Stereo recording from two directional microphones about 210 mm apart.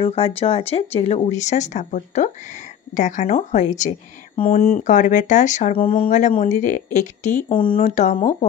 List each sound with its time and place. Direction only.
0.0 s speech: 25° left (ahead or behind)
7.4 s speech: 25° left (ahead or behind)
7.8 s speech: 35° left (ahead or behind)